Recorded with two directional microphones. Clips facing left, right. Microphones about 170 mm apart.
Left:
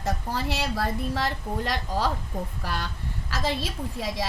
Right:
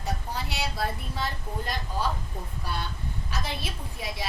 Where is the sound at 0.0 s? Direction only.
90° left.